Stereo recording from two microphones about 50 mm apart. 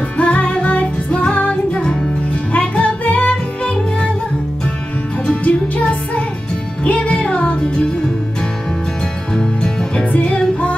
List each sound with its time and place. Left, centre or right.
0.2 s music: left
5.3 s music: left
9.3 s music: centre